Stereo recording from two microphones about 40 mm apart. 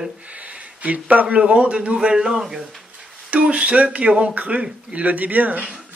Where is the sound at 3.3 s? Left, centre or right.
Right.